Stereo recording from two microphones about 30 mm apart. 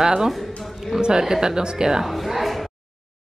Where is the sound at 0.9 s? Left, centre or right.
Right.